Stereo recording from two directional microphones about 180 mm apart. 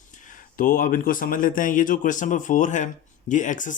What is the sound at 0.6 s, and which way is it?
Speech, 50° left (ahead or behind).